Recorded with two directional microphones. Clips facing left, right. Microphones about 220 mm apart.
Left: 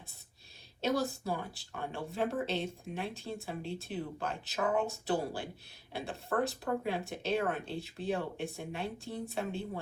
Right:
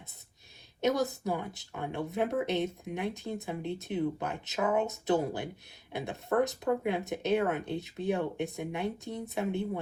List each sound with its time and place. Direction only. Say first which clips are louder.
0.8 s speech: right 3 dB; 20° right (ahead or behind)